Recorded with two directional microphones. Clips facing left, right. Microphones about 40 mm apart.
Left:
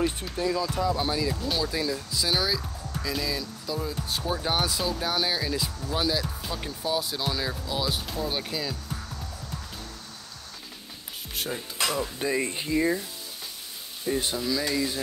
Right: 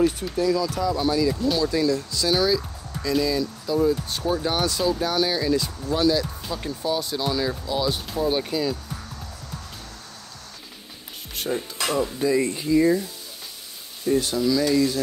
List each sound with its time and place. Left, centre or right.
0.0 s speech: centre
1.3 s speech: centre
11.3 s speech: centre
12.2 s speech: left
14.3 s speech: centre